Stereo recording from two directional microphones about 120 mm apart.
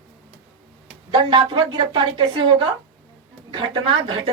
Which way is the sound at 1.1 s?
40° right (ahead or behind).